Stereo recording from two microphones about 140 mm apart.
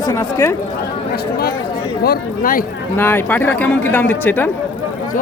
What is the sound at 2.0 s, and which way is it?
Speech, 90° left.